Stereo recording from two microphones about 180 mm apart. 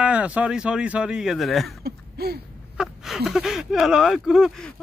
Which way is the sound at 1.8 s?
60° right (ahead or behind).